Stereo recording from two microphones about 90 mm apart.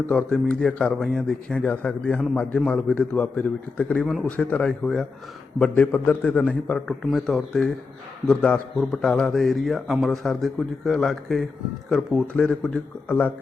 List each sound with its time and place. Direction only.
0.1 s speech: 10° left (ahead or behind)
4.0 s a man's voice: centre (ahead or behind)
4.3 s a man's voice: 15° left (ahead or behind)